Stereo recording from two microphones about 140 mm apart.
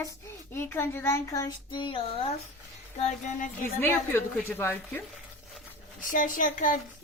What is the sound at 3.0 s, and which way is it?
Child singing, 60° left (ahead or behind).